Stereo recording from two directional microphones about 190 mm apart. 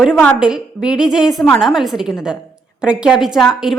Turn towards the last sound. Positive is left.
turn(degrees=0)  # may be behind; listen again after turning